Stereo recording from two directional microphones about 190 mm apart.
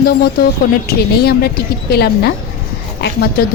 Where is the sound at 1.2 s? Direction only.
55° left (ahead or behind).